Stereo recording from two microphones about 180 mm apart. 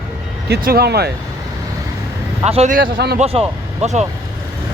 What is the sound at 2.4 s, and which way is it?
Speech, 35° right (ahead or behind).